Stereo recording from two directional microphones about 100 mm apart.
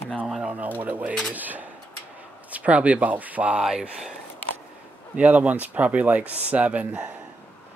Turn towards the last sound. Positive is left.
turn(degrees=-15)  # may be behind; listen again after turning